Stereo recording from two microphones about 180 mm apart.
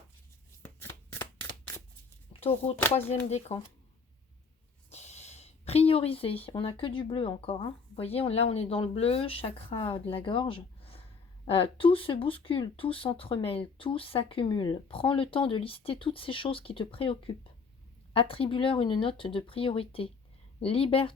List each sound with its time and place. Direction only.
0.6 s shuffling cards: 10° left (ahead or behind)
2.4 s speech: 35° left (ahead or behind)
4.9 s speech: 40° left (ahead or behind)